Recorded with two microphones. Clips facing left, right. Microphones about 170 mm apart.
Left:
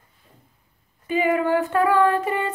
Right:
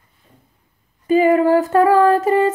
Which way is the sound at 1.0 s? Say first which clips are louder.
Right 8 dB; 40° right (ahead or behind).